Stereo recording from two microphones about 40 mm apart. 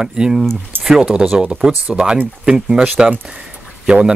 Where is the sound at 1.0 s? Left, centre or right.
Right.